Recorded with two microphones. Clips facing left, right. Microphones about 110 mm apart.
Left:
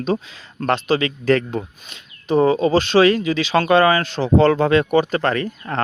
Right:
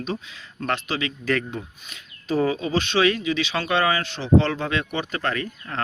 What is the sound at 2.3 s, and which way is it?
Speech, 25° left (ahead or behind).